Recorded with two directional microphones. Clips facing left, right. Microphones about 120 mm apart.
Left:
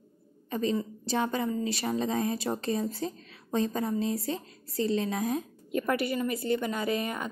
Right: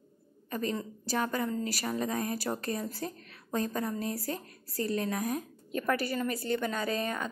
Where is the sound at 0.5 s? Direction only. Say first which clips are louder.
Left 4 dB; 20° left (ahead or behind).